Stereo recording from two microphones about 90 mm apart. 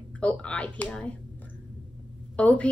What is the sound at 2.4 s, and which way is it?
Speech, 15° left (ahead or behind).